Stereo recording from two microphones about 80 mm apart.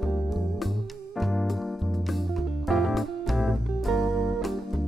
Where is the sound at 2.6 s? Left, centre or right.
Centre.